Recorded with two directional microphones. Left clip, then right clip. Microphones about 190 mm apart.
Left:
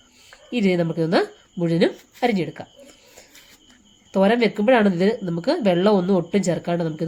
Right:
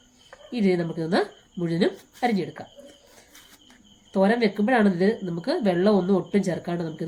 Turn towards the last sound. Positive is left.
turn(degrees=40)  # may be behind; listen again after turning